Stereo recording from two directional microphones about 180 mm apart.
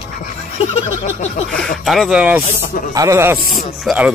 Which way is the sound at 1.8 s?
Centre (ahead or behind).